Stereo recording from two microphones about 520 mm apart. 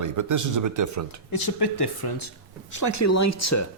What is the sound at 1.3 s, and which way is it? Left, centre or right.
Speech, left.